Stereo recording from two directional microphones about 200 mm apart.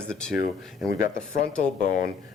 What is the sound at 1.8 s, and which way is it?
Speech, 45° left (ahead or behind).